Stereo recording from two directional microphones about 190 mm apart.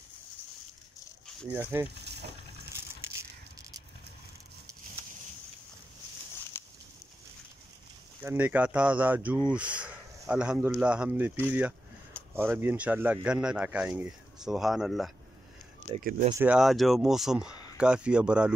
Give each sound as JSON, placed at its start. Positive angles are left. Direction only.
{"t": 1.5, "sound": "speech", "side_deg": -10}
{"t": 2.0, "sound": "a sound", "side_deg": -60}
{"t": 6.5, "sound": "a sound", "side_deg": 10}
{"t": 8.2, "sound": "speech", "side_deg": -10}
{"t": 16.0, "sound": "speech", "side_deg": -45}
{"t": 16.3, "sound": "speech", "side_deg": -5}